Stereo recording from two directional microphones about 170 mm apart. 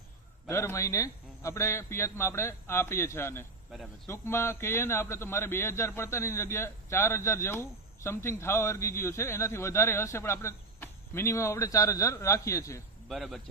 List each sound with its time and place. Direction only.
0.4 s a man's voice: 15° left (ahead or behind)
13.1 s speech: centre (ahead or behind)